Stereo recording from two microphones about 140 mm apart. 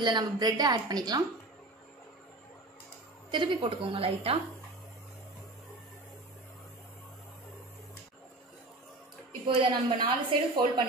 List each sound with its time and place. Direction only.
0.0 s a woman's voice: 30° right (ahead or behind)
3.3 s a woman's voice: 35° right (ahead or behind)
9.5 s a woman's voice: 40° right (ahead or behind)